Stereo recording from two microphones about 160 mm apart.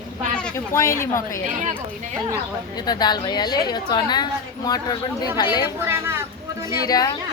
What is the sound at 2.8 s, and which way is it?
A woman's voice, 25° left (ahead or behind).